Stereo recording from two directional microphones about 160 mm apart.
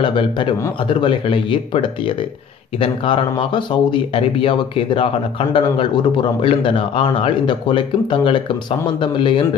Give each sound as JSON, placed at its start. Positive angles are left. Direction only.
{"t": 0.0, "sound": "speech", "side_deg": 30}